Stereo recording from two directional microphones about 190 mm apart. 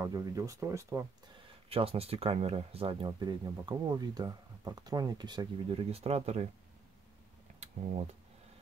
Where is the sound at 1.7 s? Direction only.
30° right (ahead or behind).